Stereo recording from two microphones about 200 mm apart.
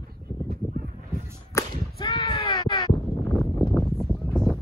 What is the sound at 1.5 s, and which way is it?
Whip, 20° left (ahead or behind).